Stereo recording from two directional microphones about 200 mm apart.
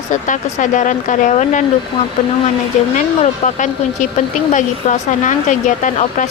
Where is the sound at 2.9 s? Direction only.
40° left (ahead or behind).